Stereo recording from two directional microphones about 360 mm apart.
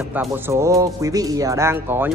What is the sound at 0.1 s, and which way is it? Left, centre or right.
Speech, centre.